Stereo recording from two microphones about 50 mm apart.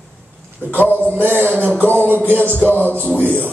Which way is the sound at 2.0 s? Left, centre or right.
Right.